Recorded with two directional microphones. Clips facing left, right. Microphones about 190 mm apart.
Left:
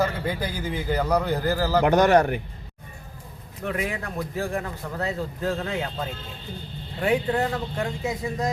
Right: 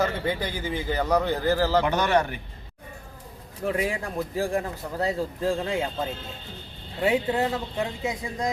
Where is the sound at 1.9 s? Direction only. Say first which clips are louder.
Left 5 dB; 40° left (ahead or behind).